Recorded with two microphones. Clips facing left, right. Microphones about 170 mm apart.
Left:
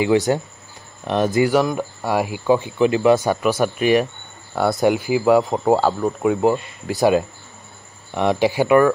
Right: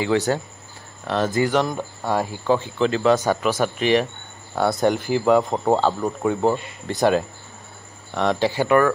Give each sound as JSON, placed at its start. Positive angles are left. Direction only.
{"t": 0.0, "sound": "speech", "side_deg": 15}
{"t": 8.1, "sound": "speech", "side_deg": 15}